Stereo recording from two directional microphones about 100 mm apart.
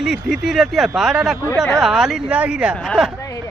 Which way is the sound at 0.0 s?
Centre (ahead or behind).